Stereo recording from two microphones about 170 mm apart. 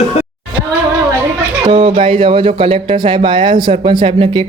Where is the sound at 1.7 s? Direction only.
30° right (ahead or behind).